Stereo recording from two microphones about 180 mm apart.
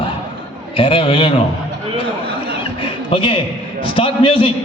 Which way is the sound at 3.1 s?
30° left (ahead or behind).